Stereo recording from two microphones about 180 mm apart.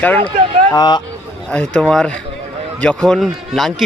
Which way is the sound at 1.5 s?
5° left (ahead or behind).